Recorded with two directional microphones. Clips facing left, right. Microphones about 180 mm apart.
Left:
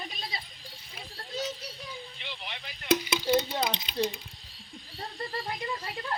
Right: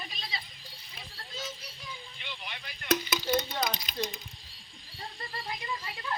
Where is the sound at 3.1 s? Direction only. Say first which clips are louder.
Left 4 dB; 10° left (ahead or behind).